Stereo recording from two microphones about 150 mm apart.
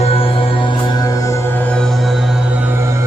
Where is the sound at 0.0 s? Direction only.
40° left (ahead or behind).